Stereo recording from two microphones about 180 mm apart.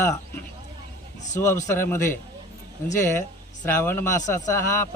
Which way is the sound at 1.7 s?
15° left (ahead or behind).